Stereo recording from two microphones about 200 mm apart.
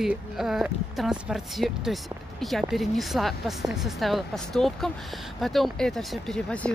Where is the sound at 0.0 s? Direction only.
Centre (ahead or behind).